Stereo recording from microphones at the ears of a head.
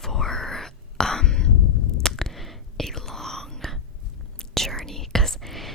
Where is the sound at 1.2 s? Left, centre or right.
Left.